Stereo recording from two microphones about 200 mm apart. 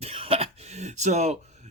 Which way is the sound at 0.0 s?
30° right (ahead or behind).